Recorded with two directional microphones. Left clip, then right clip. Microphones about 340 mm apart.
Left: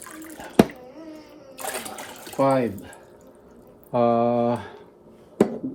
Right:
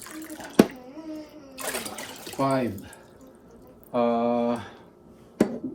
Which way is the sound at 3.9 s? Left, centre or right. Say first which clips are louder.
Left 4 dB; left.